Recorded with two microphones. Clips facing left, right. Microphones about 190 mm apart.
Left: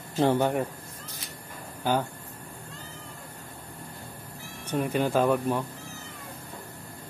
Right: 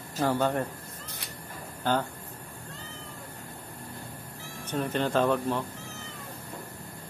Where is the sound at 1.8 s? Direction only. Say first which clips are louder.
Left 1 dB; 10° left (ahead or behind).